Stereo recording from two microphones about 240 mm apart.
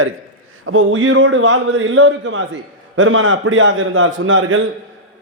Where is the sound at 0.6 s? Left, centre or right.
Right.